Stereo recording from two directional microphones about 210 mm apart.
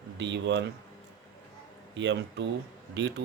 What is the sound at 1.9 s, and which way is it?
Speech, 60° right (ahead or behind).